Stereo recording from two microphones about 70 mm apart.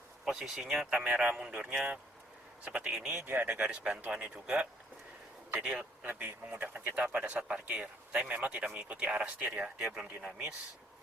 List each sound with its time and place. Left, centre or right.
0.3 s speech: centre
3.2 s speech: right
3.5 s speech: centre